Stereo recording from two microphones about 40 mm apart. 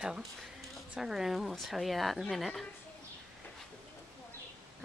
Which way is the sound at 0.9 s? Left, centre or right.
Centre.